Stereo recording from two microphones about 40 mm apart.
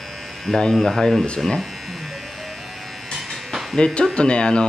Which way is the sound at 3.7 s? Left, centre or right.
Centre.